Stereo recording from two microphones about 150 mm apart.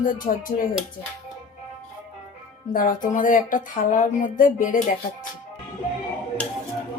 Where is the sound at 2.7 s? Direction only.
65° left (ahead or behind).